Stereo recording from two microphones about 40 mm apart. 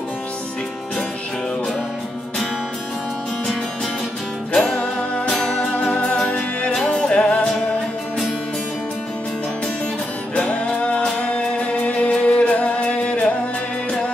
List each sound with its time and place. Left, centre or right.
4.6 s music: centre
5.6 s music: left
5.9 s music: centre
10.3 s music: left